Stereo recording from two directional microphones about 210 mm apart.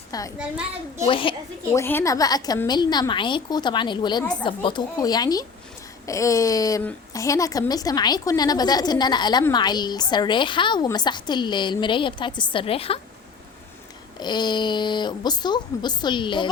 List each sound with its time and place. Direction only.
0.1 s a woman's voice: 15° left (ahead or behind)
0.3 s a child's voice: 5° right (ahead or behind)
1.0 s a woman's voice: 25° left (ahead or behind)
1.8 s a woman's voice: 10° left (ahead or behind); by 13.0 s 25° left (ahead or behind)
14.2 s a woman's voice: 20° left (ahead or behind)